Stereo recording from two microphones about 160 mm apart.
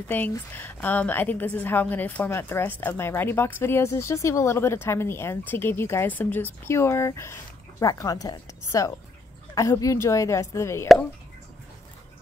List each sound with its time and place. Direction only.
0.1 s a woman's voice: 10° left (ahead or behind)